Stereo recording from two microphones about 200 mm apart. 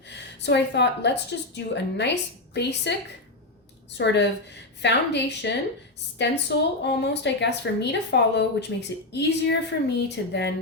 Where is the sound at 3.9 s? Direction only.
60° left (ahead or behind).